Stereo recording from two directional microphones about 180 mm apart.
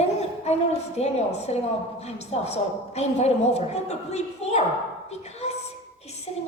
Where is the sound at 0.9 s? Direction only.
35° left (ahead or behind).